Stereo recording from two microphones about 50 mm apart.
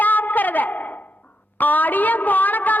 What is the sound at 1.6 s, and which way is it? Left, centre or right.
A woman's voice, left.